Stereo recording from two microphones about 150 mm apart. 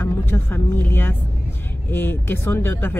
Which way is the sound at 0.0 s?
15° left (ahead or behind).